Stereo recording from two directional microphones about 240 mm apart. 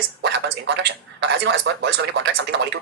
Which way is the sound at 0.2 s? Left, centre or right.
Right.